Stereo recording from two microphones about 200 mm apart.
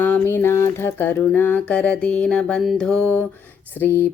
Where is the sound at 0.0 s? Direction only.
10° left (ahead or behind).